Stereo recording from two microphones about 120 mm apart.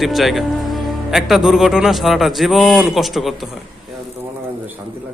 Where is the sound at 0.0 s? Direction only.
Centre (ahead or behind).